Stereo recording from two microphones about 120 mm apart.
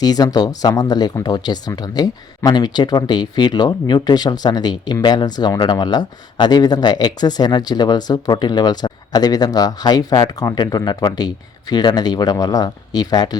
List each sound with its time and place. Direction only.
0.0 s speech: 35° left (ahead or behind)